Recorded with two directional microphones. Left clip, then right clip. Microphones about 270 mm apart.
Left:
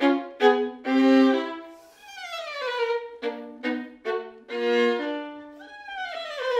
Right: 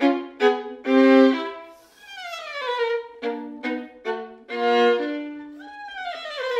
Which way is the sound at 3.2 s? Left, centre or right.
Right.